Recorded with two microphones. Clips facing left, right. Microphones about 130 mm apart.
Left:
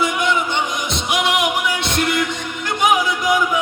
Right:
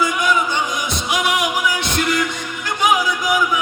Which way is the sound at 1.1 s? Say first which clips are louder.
Left 1 dB; 25° left (ahead or behind).